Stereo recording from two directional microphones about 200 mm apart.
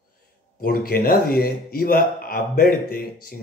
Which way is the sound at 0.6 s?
50° left (ahead or behind).